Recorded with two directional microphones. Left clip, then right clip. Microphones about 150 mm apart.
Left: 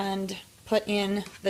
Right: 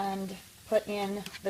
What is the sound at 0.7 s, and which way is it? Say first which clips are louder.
Speech: left 3 dB; 40° left (ahead or behind).